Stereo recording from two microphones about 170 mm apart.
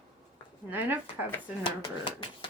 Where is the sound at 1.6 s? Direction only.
30° left (ahead or behind).